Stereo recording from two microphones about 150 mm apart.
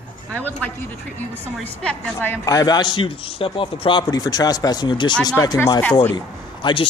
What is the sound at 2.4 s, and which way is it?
Speech, 25° left (ahead or behind).